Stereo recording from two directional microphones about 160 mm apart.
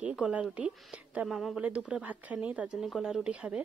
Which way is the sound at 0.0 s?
5° right (ahead or behind).